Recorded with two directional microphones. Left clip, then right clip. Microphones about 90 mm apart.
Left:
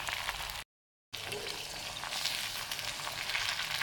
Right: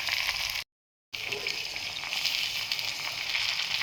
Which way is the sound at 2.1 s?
25° left (ahead or behind).